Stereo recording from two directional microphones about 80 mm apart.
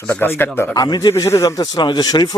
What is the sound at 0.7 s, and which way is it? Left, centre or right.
Speech, left.